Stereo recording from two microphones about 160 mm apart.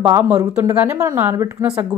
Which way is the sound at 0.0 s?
15° right (ahead or behind).